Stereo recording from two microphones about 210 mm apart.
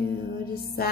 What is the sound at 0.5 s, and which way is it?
Music, 45° left (ahead or behind).